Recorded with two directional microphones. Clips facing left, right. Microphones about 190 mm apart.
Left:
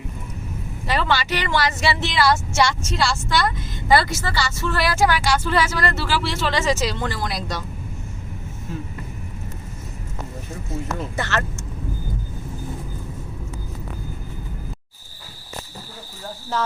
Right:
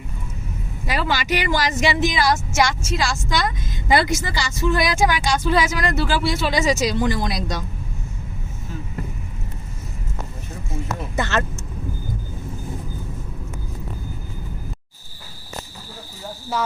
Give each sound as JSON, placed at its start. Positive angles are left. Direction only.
{"t": 0.9, "sound": "a woman's voice", "side_deg": -10}
{"t": 11.2, "sound": "a woman's voice", "side_deg": -15}